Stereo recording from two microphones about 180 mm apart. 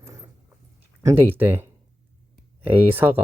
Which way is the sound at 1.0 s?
15° right (ahead or behind).